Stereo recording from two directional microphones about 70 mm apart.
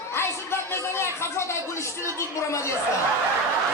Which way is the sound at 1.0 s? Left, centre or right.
Left.